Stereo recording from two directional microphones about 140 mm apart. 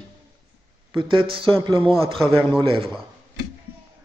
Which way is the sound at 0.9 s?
40° right (ahead or behind).